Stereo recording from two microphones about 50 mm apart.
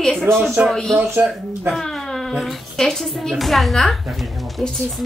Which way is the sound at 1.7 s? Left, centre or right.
Centre.